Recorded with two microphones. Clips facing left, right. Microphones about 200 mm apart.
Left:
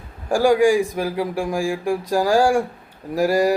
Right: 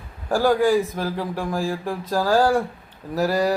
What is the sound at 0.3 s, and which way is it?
Speech, 10° left (ahead or behind).